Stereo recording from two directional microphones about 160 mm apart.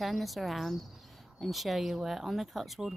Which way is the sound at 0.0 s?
Centre (ahead or behind).